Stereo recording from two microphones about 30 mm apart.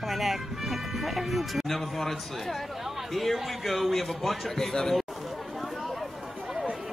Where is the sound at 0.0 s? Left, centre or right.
Centre.